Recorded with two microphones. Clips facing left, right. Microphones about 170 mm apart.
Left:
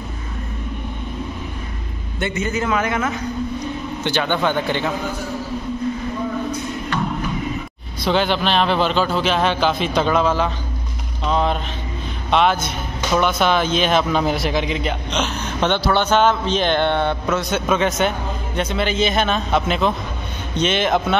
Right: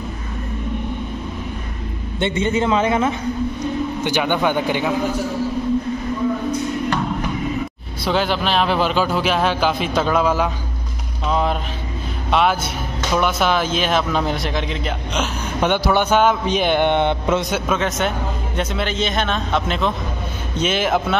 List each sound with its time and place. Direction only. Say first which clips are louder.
2.1 s a man's voice: right 3 dB; 25° right (ahead or behind)
4.0 s speech: even; 10° right (ahead or behind)
8.0 s speech: left 1 dB; 5° right (ahead or behind)
17.5 s speech: left 2 dB; 5° right (ahead or behind)